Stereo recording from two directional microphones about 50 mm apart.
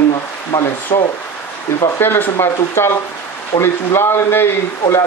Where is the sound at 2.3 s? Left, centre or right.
Left.